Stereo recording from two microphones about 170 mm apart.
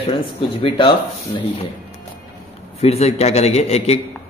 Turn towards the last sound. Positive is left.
turn(degrees=40)  # may be behind; listen again after turning